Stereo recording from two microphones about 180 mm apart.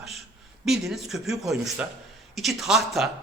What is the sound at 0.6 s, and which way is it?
A man's voice, centre (ahead or behind).